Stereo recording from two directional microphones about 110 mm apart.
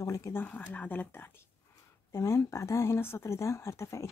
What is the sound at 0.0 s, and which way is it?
Speech, 30° left (ahead or behind).